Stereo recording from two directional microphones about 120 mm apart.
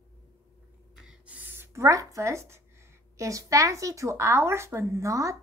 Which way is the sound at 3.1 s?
25° right (ahead or behind).